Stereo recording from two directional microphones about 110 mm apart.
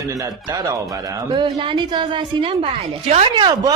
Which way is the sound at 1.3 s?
45° right (ahead or behind).